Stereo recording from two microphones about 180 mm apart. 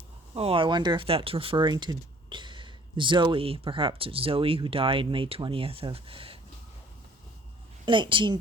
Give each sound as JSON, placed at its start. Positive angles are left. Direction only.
{"t": 0.3, "sound": "speech", "side_deg": -30}
{"t": 7.9, "sound": "speech", "side_deg": -25}